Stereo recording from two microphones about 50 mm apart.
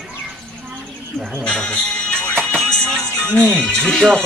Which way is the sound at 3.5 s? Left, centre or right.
Centre.